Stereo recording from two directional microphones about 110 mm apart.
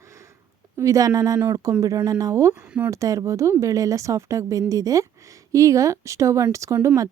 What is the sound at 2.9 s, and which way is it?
Speech, 30° right (ahead or behind).